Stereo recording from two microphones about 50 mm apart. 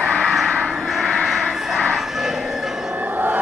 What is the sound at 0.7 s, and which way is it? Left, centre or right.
Vehicle, centre.